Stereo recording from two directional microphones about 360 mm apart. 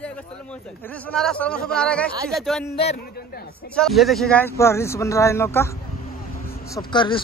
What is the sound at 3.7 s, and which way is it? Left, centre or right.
Speech, centre.